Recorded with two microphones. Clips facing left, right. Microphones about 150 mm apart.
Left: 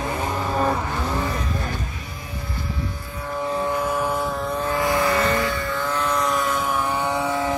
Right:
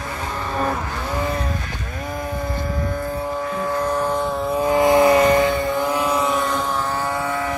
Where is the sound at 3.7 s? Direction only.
10° left (ahead or behind).